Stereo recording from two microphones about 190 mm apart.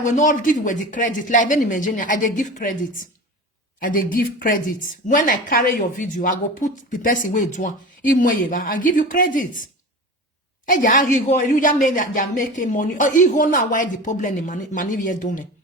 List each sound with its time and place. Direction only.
0.0 s a woman's voice: 40° left (ahead or behind)
3.8 s a woman's voice: 45° left (ahead or behind)
10.7 s a woman's voice: 45° left (ahead or behind)